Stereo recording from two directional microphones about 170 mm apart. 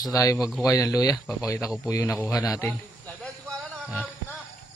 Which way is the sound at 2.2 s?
15° left (ahead or behind).